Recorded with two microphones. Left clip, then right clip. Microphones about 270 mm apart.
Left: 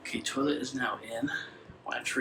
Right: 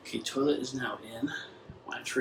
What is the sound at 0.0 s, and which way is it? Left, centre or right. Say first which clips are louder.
Speech: right 1 dB; centre.